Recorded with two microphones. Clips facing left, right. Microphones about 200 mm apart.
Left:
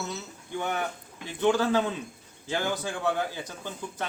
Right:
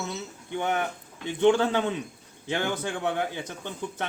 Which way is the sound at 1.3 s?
20° right (ahead or behind).